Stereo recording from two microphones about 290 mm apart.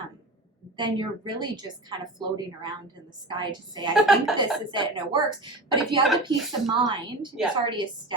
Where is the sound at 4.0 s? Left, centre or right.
Centre.